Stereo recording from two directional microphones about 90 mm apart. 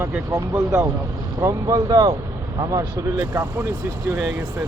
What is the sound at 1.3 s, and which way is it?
Speech, 40° right (ahead or behind).